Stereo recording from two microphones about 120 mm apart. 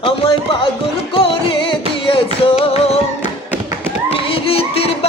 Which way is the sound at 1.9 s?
45° left (ahead or behind).